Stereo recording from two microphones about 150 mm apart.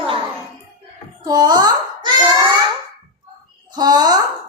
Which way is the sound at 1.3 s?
30° right (ahead or behind).